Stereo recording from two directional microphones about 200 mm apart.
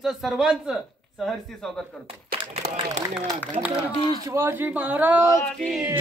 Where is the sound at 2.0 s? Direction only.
30° right (ahead or behind).